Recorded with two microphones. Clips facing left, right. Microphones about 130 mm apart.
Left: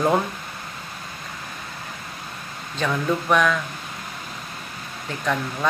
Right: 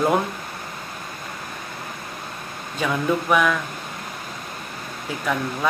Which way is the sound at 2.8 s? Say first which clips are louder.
Right 1 dB; 5° right (ahead or behind).